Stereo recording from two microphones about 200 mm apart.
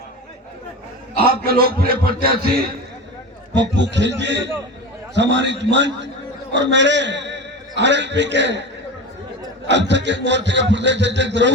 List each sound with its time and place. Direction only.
1.1 s a man's voice: 50° right (ahead or behind)
3.5 s a man's voice: 60° right (ahead or behind)
9.6 s speech: 60° right (ahead or behind)